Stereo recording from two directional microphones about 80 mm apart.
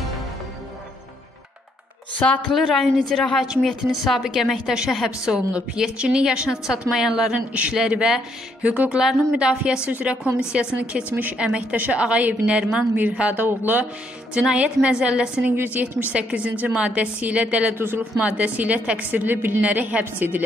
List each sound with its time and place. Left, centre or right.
2.2 s a woman's voice: centre
2.5 s a woman's voice: centre
7.3 s a woman's voice: centre
14.3 s a woman's voice: centre
17.7 s a woman's voice: right
18.2 s a woman's voice: centre